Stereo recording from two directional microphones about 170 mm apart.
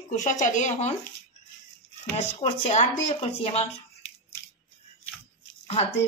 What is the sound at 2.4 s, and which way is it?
Speech, 35° left (ahead or behind).